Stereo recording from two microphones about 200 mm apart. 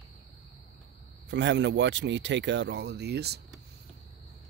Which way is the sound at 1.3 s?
60° right (ahead or behind).